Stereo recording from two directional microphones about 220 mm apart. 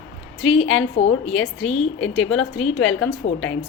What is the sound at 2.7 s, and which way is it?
Speech, 60° left (ahead or behind).